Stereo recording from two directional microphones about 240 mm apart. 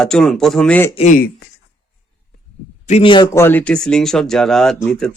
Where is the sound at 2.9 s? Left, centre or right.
Left.